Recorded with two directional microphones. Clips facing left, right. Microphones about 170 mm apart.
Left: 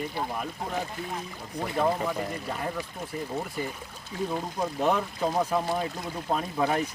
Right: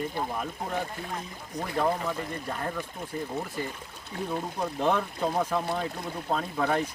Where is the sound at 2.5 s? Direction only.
5° left (ahead or behind).